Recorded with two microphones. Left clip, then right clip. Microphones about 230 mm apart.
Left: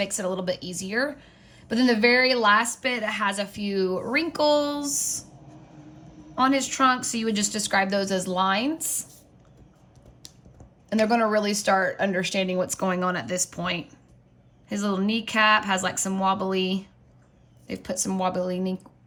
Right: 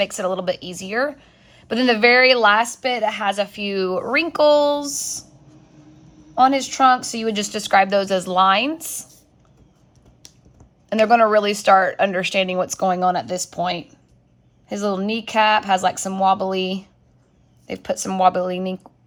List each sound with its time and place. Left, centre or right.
0.0 s a woman's voice: centre
6.4 s a woman's voice: centre
10.2 s speech: centre
13.0 s speech: centre
13.5 s a woman's voice: centre